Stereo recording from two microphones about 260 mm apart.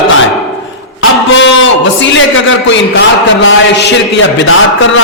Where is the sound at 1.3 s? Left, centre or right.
Left.